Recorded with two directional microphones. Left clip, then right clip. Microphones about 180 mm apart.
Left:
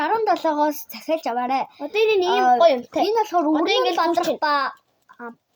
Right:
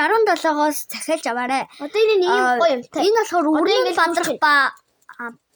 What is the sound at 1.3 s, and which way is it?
Speech, 60° right (ahead or behind).